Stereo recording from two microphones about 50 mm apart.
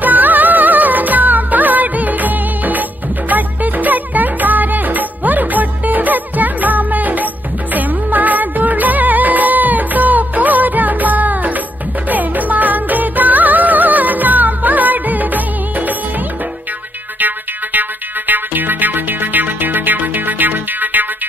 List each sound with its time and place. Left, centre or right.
0.0 s music of bollywood: right
3.3 s music: right
7.7 s music of bollywood: right
17.7 s music: right